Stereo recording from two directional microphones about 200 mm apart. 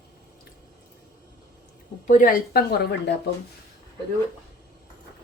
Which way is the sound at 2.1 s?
40° left (ahead or behind).